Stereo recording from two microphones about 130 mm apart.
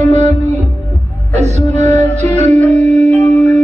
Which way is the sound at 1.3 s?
60° right (ahead or behind).